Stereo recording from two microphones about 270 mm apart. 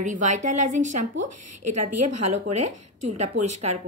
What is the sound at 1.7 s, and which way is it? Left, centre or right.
A woman's voice, right.